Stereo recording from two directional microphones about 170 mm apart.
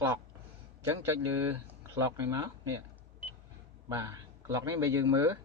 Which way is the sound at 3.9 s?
20° right (ahead or behind).